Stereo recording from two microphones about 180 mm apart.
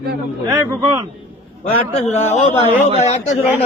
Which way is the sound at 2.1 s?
35° left (ahead or behind).